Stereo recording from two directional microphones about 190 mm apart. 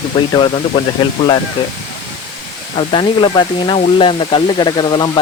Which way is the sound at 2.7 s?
25° left (ahead or behind).